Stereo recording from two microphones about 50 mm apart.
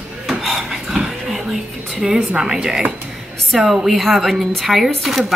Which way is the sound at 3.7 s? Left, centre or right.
Centre.